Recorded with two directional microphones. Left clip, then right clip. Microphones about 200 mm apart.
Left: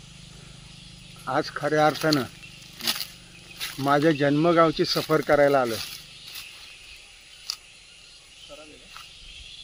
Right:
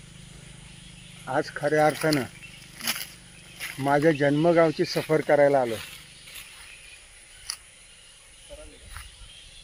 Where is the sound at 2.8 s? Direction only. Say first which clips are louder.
Left 3 dB; 25° left (ahead or behind).